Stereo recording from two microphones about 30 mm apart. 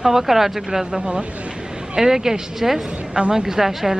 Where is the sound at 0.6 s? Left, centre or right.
Right.